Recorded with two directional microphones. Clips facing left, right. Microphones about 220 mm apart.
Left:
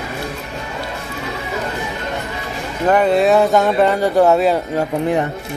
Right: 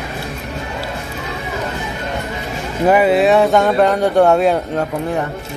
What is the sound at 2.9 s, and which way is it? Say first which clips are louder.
Speech: right 1 dB; 5° right (ahead or behind).